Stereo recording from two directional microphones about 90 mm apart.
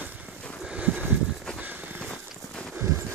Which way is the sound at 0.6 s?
15° right (ahead or behind).